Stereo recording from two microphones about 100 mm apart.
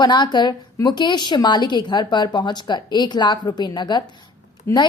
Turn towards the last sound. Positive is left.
turn(degrees=25)  # may be behind; listen again after turning